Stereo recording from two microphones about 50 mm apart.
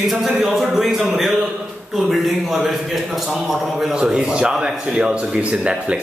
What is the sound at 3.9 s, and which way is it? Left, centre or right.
A man's voice, centre.